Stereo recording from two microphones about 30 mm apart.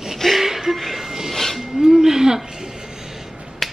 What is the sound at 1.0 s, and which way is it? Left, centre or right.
Music, centre.